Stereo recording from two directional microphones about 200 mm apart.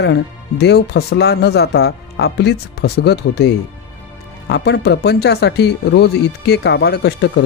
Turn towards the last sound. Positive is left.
turn(degrees=55)  # may be behind; listen again after turning